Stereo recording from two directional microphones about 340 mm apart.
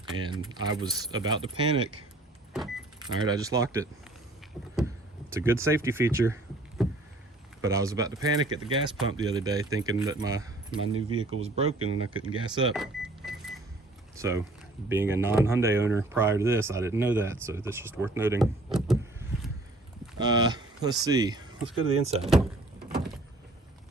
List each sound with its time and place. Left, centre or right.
0.2 s speech: centre
3.0 s speech: centre
4.6 s vehicle: centre
5.3 s speech: centre
6.8 s vehicle: centre
7.6 s speech: centre
11.6 s speech: right
12.3 s speech: centre
12.7 s power windows: centre
14.2 s speech: centre
20.1 s a sound: centre
21.0 s speech: centre